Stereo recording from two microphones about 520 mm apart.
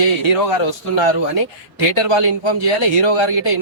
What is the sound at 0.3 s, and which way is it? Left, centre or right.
Speech, left.